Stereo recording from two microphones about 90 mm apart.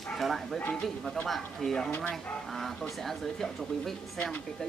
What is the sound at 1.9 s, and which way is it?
Speech, 15° left (ahead or behind).